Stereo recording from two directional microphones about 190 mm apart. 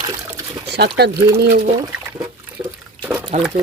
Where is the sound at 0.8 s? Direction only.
60° right (ahead or behind).